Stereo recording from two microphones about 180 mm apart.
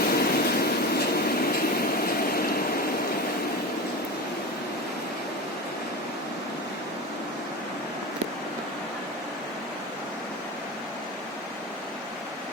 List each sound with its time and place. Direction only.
0.1 s train: 60° left (ahead or behind)